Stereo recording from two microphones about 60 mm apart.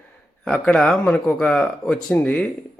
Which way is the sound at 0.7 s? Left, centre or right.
Centre.